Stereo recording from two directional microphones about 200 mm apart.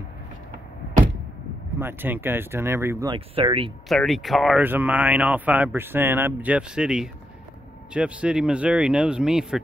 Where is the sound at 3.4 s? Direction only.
25° right (ahead or behind).